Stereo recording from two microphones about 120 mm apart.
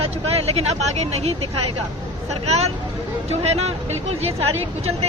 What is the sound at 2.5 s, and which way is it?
Speech, 60° right (ahead or behind).